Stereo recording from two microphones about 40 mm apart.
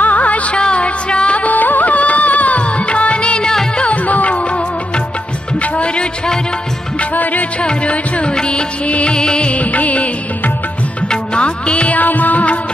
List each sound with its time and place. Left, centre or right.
0.0 s music: left
0.6 s music: left
5.6 s music: left
7.6 s music: left
11.1 s music: left
12.0 s music: left